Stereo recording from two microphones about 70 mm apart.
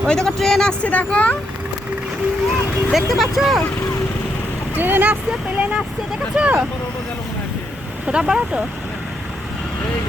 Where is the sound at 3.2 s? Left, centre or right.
Centre.